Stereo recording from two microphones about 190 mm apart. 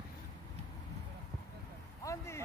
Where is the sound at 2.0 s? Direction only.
15° left (ahead or behind).